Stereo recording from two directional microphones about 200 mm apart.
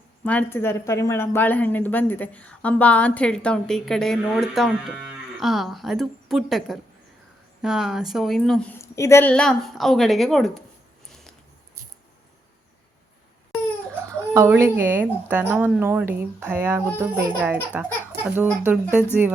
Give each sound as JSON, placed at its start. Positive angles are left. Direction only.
{"t": 0.3, "sound": "a woman's voice", "side_deg": 10}
{"t": 14.3, "sound": "speech", "side_deg": -10}